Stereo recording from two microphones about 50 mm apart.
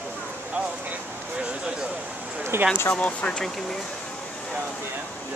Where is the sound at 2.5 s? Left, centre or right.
Right.